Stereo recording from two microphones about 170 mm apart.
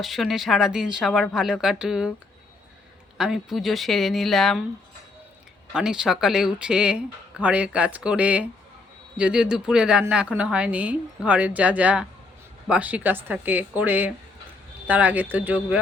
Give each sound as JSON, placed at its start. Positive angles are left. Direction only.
{"t": 0.0, "sound": "speech", "side_deg": 0}
{"t": 3.2, "sound": "speech", "side_deg": 0}
{"t": 5.7, "sound": "a woman's voice", "side_deg": -5}